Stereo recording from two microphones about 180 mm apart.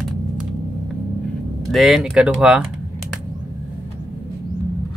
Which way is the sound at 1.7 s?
Centre (ahead or behind).